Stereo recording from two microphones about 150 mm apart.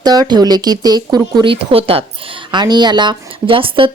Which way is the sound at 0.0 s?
25° right (ahead or behind).